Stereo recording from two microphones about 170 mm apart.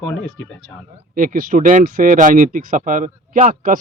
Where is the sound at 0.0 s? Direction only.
5° left (ahead or behind).